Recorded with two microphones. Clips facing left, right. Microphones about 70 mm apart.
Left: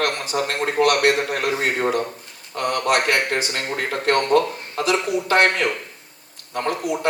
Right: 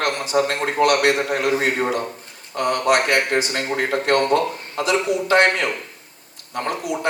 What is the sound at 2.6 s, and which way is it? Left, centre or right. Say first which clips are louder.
A man's voice: right 2 dB; right.